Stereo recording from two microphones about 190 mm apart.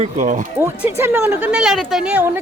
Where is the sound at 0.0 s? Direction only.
40° right (ahead or behind).